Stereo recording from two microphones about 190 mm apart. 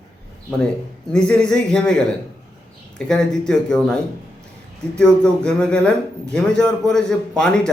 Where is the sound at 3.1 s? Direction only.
5° left (ahead or behind).